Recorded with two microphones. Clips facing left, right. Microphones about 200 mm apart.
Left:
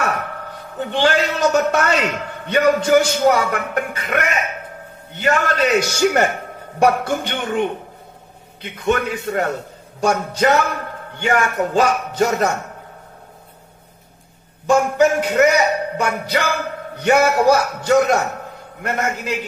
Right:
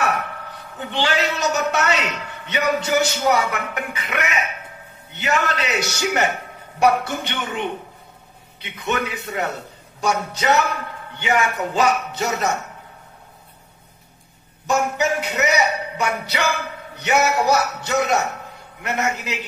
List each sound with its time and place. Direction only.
0.4 s a man's voice: 45° left (ahead or behind)
14.7 s a man's voice: 50° left (ahead or behind)